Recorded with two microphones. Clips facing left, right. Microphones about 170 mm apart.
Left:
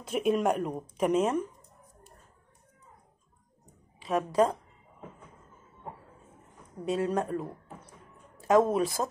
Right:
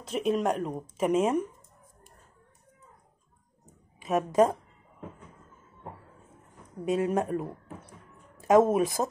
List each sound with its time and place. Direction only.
0.0 s speech: centre (ahead or behind)
4.1 s speech: 20° right (ahead or behind)
6.8 s speech: 15° right (ahead or behind)
8.7 s speech: 20° right (ahead or behind)